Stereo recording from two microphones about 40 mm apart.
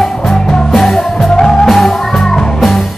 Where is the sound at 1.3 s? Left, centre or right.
Centre.